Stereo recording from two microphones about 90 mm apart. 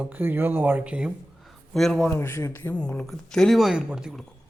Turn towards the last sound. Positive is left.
turn(degrees=-10)  # may be behind; listen again after turning